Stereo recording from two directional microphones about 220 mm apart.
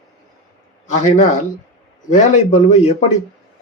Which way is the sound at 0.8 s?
30° left (ahead or behind).